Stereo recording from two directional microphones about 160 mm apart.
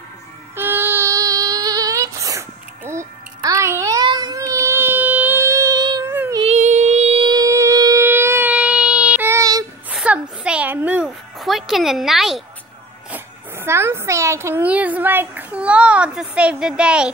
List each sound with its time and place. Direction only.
0.6 s child singing: 15° right (ahead or behind)
6.4 s child singing: 45° right (ahead or behind); by 9.7 s 20° right (ahead or behind)
9.8 s music: 10° right (ahead or behind)
13.1 s speech: 15° right (ahead or behind)